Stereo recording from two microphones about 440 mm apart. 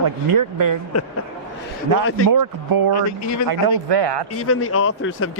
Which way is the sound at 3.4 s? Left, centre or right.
Right.